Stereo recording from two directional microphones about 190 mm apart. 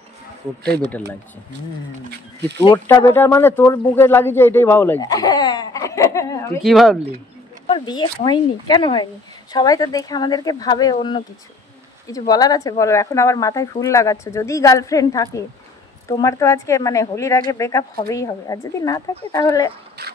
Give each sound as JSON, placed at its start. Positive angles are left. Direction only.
{"t": 2.0, "sound": "speech", "side_deg": -60}
{"t": 2.6, "sound": "speech", "side_deg": 20}
{"t": 6.6, "sound": "speech", "side_deg": 0}
{"t": 7.6, "sound": "speech", "side_deg": 25}